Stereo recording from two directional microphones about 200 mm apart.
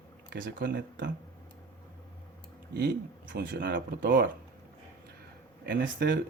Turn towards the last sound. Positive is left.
turn(degrees=-60)  # may be behind; listen again after turning